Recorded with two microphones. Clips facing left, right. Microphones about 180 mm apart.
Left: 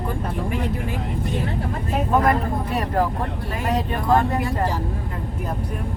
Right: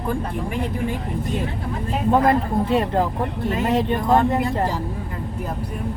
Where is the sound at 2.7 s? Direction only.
25° right (ahead or behind).